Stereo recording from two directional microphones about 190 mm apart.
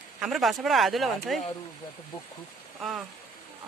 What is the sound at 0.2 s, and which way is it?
Speech, centre (ahead or behind).